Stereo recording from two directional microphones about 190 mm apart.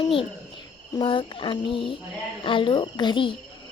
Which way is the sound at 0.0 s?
30° left (ahead or behind).